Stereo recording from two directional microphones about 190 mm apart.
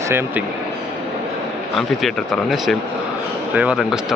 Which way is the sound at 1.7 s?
Centre (ahead or behind).